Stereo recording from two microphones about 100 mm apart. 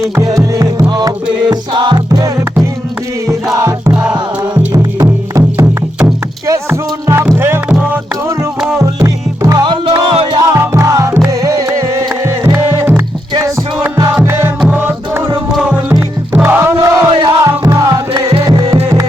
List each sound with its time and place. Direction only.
0.2 s music: 35° right (ahead or behind); by 2.0 s 50° right (ahead or behind)
2.0 s music: 35° right (ahead or behind)
3.6 s music: 30° right (ahead or behind)
3.9 s music: 10° right (ahead or behind)
4.5 s music: 40° right (ahead or behind)
6.5 s music: 25° right (ahead or behind)
8.8 s music: 30° right (ahead or behind)
9.6 s music: 55° right (ahead or behind)
10.5 s music: 30° right (ahead or behind)
13.9 s music: 30° right (ahead or behind)